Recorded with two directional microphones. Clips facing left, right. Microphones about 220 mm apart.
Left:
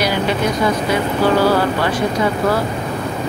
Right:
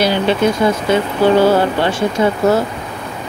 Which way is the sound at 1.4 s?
25° right (ahead or behind).